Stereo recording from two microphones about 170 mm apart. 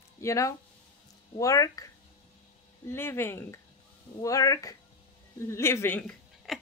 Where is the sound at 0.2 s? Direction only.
20° left (ahead or behind).